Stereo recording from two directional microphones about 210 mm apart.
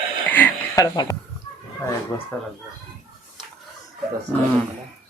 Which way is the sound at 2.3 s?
10° left (ahead or behind).